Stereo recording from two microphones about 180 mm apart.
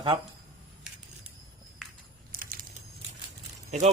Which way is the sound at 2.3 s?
50° right (ahead or behind).